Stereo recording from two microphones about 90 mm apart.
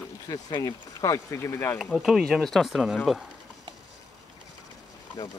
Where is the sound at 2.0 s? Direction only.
5° right (ahead or behind).